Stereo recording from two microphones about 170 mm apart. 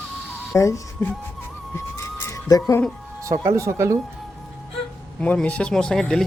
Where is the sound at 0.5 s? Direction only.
20° left (ahead or behind).